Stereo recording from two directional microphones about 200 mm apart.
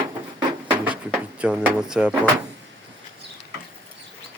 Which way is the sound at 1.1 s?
5° right (ahead or behind).